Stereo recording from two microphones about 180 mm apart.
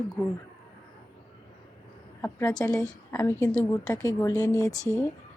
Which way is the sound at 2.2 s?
10° left (ahead or behind).